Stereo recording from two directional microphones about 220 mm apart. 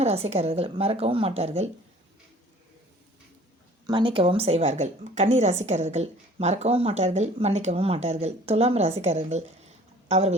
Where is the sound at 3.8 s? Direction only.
20° right (ahead or behind).